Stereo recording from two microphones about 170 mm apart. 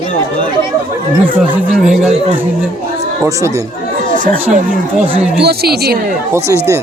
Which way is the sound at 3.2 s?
15° right (ahead or behind).